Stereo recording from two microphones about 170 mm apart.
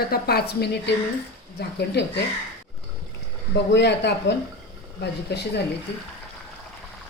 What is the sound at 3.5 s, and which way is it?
Speech, 90° left.